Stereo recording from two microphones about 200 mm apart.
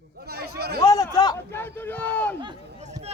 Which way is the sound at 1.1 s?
15° left (ahead or behind).